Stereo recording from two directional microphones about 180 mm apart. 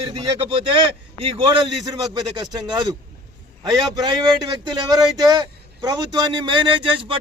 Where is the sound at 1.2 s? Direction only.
30° right (ahead or behind).